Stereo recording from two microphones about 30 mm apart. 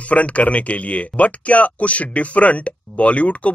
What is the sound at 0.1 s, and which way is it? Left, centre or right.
Speech, left.